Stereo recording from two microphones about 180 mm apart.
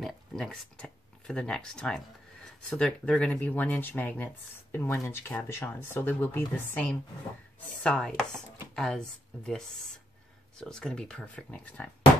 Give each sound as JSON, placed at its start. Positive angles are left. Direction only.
{"t": 0.0, "sound": "speech", "side_deg": 0}
{"t": 7.8, "sound": "chopping", "side_deg": 5}
{"t": 8.2, "sound": "speech", "side_deg": 0}